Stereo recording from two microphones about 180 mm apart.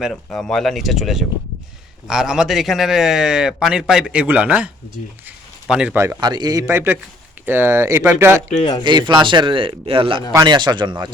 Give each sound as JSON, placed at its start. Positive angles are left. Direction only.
{"t": 0.0, "sound": "a man's voice", "side_deg": 0}
{"t": 8.8, "sound": "a man's voice", "side_deg": -25}